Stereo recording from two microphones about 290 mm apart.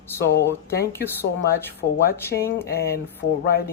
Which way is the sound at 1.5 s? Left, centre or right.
Centre.